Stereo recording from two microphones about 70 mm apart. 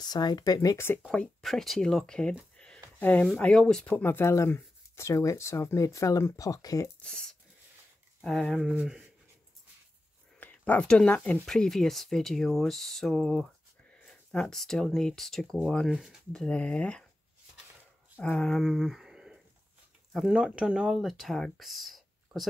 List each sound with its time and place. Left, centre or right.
0.0 s speech: left
1.0 s speech: centre
1.4 s speech: centre
2.5 s a sound: centre
3.0 s speech: left
3.8 s speech: left
7.0 s speech: centre
8.5 s speech: centre
10.4 s speech: left; by 15.6 s centre
15.9 s speech: centre
16.3 s speech: centre
18.2 s speech: centre